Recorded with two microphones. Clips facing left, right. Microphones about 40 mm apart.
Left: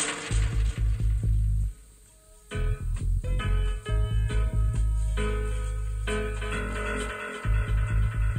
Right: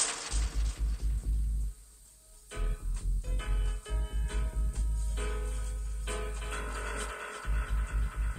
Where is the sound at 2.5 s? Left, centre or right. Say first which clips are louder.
Left 8 dB; left.